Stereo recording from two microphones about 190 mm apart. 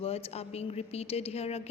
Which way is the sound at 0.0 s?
30° left (ahead or behind).